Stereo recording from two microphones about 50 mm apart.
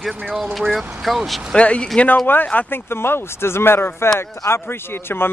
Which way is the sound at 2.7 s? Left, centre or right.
Left.